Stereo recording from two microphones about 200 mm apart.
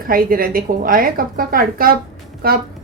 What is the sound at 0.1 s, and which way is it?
A woman's voice, 45° right (ahead or behind).